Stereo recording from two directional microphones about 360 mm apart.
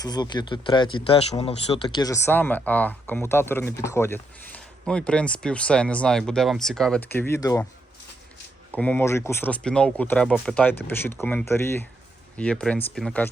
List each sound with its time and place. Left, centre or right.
0.0 s speech: centre
8.7 s speech: centre